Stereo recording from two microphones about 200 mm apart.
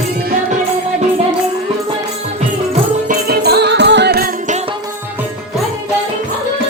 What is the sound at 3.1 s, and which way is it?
Music, 50° right (ahead or behind).